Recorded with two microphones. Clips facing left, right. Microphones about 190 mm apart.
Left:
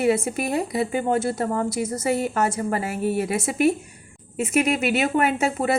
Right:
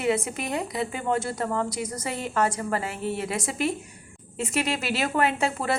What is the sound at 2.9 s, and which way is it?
Speech, 25° right (ahead or behind).